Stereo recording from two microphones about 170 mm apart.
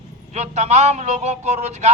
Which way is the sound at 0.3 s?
40° right (ahead or behind).